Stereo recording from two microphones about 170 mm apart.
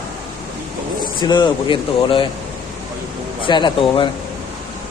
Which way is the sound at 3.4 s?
30° left (ahead or behind).